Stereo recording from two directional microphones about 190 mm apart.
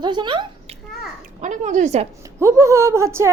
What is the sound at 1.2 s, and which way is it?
Speech, 40° right (ahead or behind).